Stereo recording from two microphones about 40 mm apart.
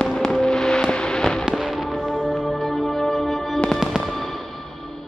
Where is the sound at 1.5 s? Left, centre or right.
Centre.